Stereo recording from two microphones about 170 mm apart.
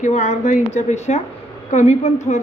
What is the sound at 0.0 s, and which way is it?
A woman's voice, 45° left (ahead or behind).